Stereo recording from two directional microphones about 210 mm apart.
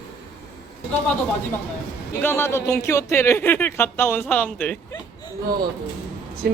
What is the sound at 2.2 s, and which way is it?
Speech, 10° left (ahead or behind).